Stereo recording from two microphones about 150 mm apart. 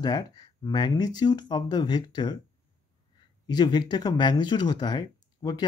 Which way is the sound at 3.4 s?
30° left (ahead or behind).